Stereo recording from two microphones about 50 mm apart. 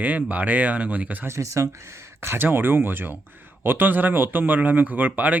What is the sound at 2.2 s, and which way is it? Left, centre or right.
Speech, right.